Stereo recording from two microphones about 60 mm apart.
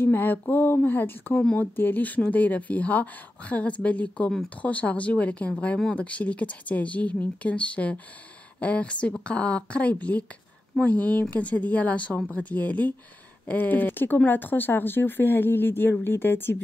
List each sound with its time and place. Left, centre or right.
0.0 s speech: left